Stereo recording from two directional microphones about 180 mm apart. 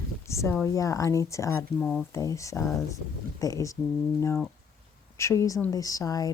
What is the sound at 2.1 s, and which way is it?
Speech, 15° left (ahead or behind).